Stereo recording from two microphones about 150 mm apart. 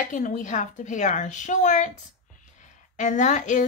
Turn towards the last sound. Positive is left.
turn(degrees=55)  # may be behind; listen again after turning